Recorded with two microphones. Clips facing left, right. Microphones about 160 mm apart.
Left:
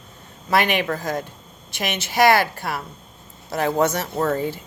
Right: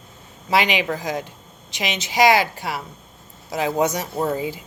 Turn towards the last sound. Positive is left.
turn(degrees=-10)  # may be behind; listen again after turning